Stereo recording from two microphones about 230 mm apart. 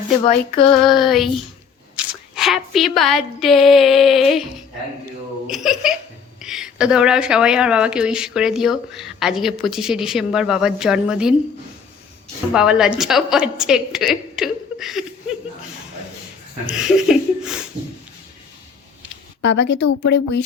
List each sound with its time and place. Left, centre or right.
0.3 s child singing: left
0.9 s speech: centre
2.3 s speech: centre
5.5 s speech: centre
12.5 s speech: centre
16.6 s speech: centre
19.4 s speech: left